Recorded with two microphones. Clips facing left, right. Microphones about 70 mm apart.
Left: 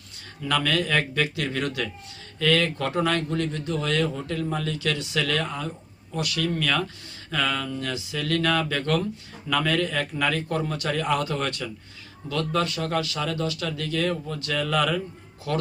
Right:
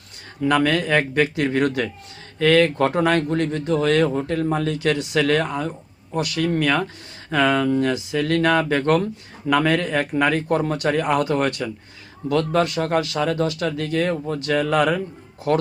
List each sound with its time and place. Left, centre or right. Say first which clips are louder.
0.4 s speech: right 6 dB; right